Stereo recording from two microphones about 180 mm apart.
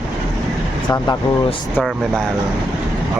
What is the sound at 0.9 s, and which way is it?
Speech, 25° left (ahead or behind).